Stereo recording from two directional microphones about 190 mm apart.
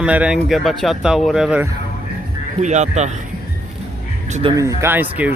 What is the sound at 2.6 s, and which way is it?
Speech, 40° right (ahead or behind).